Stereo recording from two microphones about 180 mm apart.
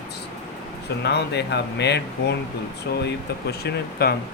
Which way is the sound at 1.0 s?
70° left (ahead or behind).